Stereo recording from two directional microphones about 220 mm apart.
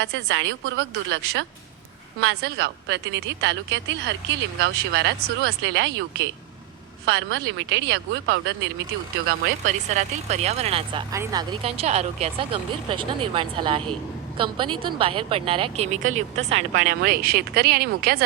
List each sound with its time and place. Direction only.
0.0 s a woman's voice: 60° right (ahead or behind)
9.6 s speech: 30° right (ahead or behind)
11.1 s speech: 15° right (ahead or behind)
11.6 s speech: 30° right (ahead or behind); by 18.2 s 45° right (ahead or behind)